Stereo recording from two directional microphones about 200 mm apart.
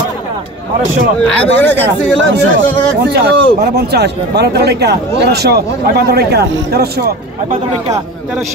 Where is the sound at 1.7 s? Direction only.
65° right (ahead or behind).